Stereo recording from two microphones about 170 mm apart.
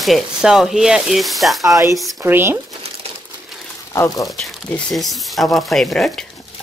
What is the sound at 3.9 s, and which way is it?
Speech, 20° left (ahead or behind).